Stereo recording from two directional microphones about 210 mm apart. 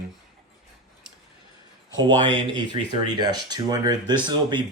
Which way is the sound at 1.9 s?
20° right (ahead or behind).